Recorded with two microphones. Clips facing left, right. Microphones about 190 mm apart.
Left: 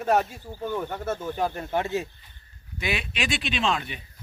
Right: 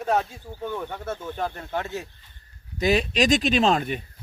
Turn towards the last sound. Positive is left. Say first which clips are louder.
# right 6 dB
turn(degrees=-45)  # may be behind; listen again after turning